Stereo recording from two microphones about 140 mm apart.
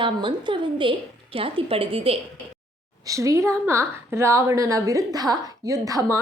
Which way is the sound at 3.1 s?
20° right (ahead or behind).